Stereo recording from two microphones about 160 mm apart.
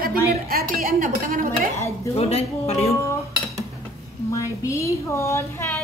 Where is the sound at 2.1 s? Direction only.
40° left (ahead or behind).